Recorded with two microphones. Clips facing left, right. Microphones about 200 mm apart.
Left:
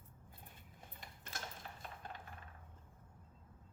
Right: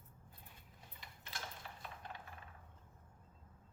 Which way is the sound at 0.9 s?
45° left (ahead or behind).